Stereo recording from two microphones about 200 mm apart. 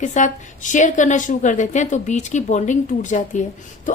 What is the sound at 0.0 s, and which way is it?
A woman's voice, 40° left (ahead or behind).